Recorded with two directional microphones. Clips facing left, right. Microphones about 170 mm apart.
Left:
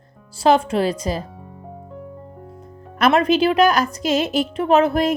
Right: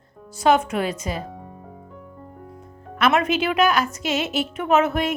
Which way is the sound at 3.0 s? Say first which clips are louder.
Left 4 dB; 35° left (ahead or behind).